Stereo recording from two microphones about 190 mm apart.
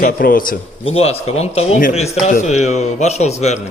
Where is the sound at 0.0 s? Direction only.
50° left (ahead or behind).